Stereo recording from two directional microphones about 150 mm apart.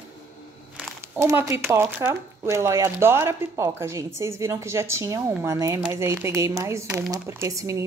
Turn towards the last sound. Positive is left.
turn(degrees=-20)  # may be behind; listen again after turning